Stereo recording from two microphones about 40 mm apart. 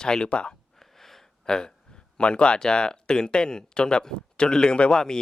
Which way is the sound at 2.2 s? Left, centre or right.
Left.